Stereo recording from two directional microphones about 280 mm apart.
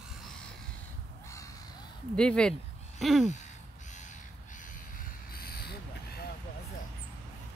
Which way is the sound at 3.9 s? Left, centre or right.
Left.